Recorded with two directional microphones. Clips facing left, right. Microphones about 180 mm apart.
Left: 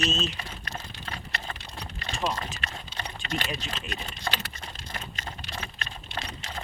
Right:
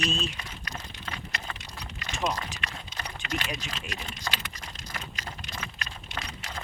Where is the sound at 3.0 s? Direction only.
35° left (ahead or behind).